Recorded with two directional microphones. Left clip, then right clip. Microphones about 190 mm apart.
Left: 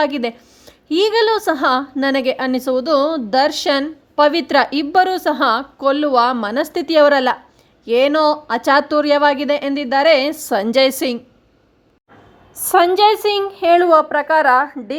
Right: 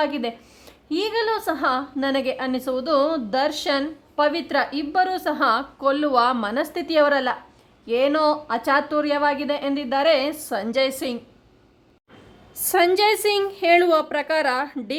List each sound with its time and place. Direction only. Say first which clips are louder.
0.0 s a woman's voice: left 6 dB; 25° left (ahead or behind)
12.6 s speech: left 6 dB; 10° left (ahead or behind)